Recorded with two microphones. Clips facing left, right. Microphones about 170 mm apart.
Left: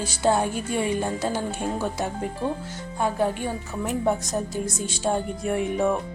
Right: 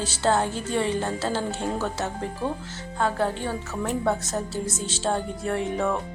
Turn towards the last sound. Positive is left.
turn(degrees=15)  # may be behind; listen again after turning